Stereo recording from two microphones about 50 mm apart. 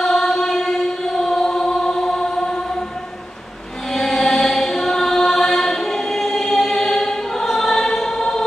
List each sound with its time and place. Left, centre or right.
0.0 s chant: centre
3.9 s chant: centre